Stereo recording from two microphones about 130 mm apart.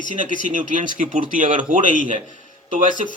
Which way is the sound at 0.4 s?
75° right (ahead or behind).